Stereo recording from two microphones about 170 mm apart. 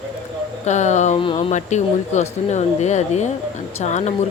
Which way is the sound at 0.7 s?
45° left (ahead or behind).